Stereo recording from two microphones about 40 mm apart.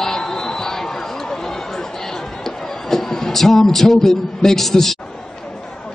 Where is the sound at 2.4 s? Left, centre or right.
Centre.